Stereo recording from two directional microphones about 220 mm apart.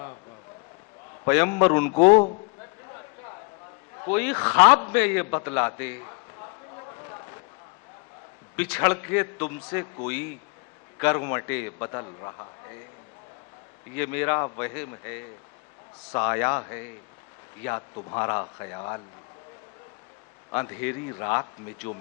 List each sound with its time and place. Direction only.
1.3 s a man's voice: 10° left (ahead or behind)
4.1 s a man's voice: 10° left (ahead or behind)
8.7 s a man's voice: 15° left (ahead or behind)
13.9 s a man's voice: 10° left (ahead or behind)
16.1 s a man's voice: 15° left (ahead or behind)
20.5 s a man's voice: 15° left (ahead or behind)